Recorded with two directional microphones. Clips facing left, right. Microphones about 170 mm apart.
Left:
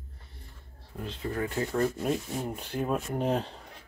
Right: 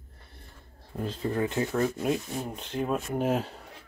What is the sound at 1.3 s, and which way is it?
Speech, 20° right (ahead or behind).